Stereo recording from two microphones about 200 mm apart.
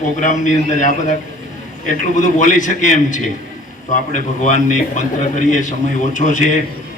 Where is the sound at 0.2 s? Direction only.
40° left (ahead or behind).